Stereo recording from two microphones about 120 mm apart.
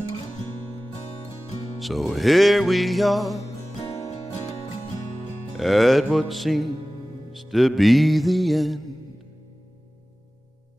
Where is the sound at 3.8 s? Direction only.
60° left (ahead or behind).